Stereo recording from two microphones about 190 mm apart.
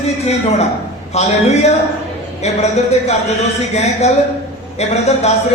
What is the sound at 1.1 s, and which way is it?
Speech, 35° left (ahead or behind).